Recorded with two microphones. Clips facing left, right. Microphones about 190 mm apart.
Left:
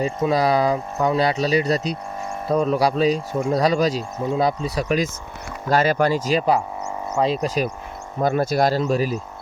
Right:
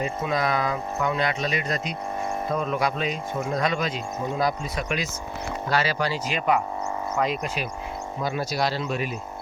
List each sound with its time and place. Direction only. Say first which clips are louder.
0.0 s speech: left 6 dB; 35° left (ahead or behind)
5.6 s speech: left 7 dB; 50° left (ahead or behind)
8.2 s speech: left 8 dB; 50° left (ahead or behind)